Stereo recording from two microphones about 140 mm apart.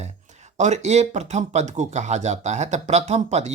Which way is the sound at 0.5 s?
55° right (ahead or behind).